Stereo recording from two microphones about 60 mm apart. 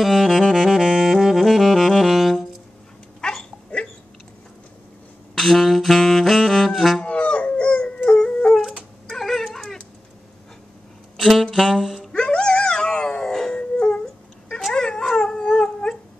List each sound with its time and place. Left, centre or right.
0.0 s saxophone: centre
3.2 s dog: centre
5.3 s saxophone: centre
7.0 s howl: centre
9.1 s dog: centre
11.1 s saxophone: centre
12.1 s dog: centre